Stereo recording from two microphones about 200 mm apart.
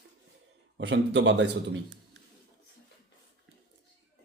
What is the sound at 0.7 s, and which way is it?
A man's voice, 65° right (ahead or behind).